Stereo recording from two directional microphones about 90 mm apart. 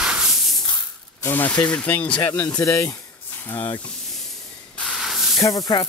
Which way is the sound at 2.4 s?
35° left (ahead or behind).